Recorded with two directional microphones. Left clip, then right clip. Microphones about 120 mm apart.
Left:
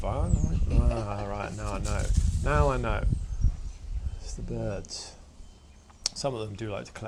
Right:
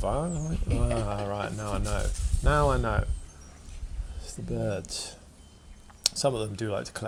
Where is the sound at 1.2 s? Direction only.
25° right (ahead or behind).